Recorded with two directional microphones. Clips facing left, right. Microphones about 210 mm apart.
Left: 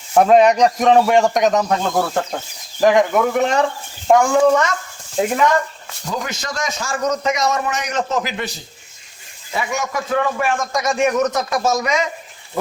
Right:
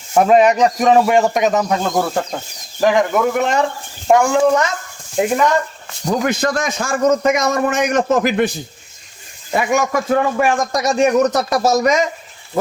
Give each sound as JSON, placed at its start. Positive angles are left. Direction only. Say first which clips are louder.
{"t": 0.1, "sound": "a man's voice", "louder": "even", "side_deg": 0}
{"t": 6.1, "sound": "a man's voice", "louder": "right 9 dB", "side_deg": -55}